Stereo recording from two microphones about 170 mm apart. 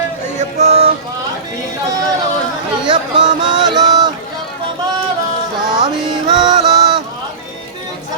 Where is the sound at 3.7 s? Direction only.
25° right (ahead or behind).